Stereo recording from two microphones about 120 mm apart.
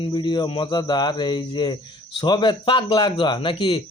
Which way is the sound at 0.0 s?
40° left (ahead or behind).